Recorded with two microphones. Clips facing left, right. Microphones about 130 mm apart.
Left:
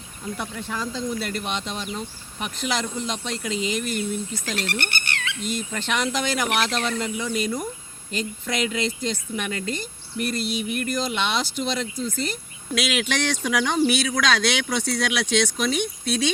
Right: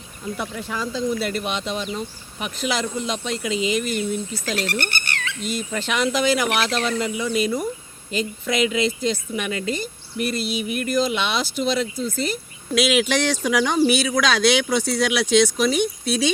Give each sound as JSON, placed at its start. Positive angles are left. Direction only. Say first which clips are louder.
{"t": 0.3, "sound": "a woman's voice", "louder": "right 2 dB", "side_deg": -5}
{"t": 4.5, "sound": "speech", "louder": "right 3 dB", "side_deg": -40}
{"t": 5.5, "sound": "a woman's voice", "louder": "right 2 dB", "side_deg": -5}